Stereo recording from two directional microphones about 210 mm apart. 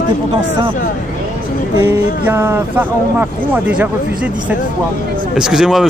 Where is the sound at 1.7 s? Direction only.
10° right (ahead or behind).